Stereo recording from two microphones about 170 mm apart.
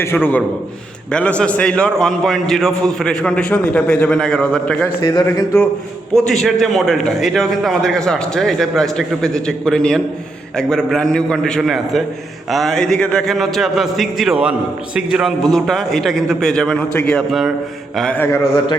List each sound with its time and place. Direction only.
0.0 s mantra: 15° left (ahead or behind)
1.1 s a man's voice: 5° left (ahead or behind)
5.0 s speech: 20° left (ahead or behind)
6.1 s a man's voice: centre (ahead or behind)
17.9 s mantra: 5° left (ahead or behind)